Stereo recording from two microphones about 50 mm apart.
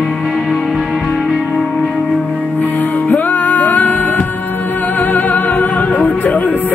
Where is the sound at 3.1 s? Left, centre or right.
Left.